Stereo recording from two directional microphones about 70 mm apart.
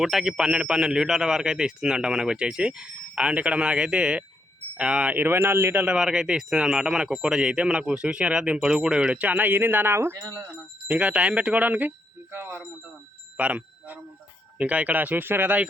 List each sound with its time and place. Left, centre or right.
0.0 s speech: centre
5.1 s speech: right
5.8 s speech: centre; by 10.2 s right
10.8 s speech: centre
13.3 s speech: right